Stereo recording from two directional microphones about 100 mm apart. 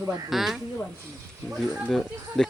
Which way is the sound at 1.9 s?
Centre (ahead or behind).